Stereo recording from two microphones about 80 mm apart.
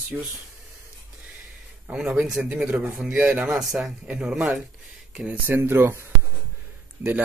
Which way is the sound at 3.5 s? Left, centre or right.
Centre.